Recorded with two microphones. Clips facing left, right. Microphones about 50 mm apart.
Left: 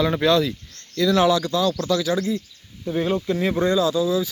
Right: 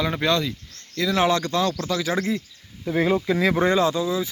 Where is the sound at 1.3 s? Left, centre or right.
Right.